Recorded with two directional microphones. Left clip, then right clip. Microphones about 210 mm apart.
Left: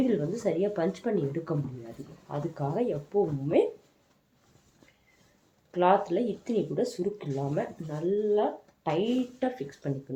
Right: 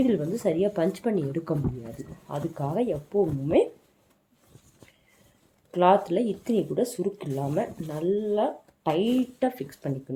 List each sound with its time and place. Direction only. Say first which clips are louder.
0.0 s speech: right 3 dB; 45° right (ahead or behind)
5.7 s speech: right 3 dB; 45° right (ahead or behind)